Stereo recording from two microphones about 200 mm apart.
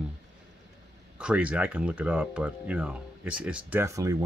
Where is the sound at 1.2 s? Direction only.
5° right (ahead or behind).